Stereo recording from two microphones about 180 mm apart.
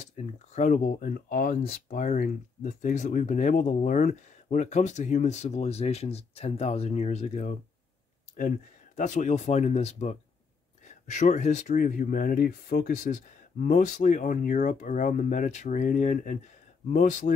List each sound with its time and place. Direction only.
0.0 s speech: 40° left (ahead or behind)